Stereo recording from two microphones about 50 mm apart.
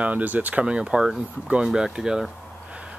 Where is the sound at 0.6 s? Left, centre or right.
Centre.